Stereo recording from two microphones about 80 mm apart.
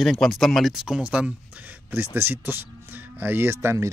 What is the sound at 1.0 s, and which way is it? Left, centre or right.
Speech, centre.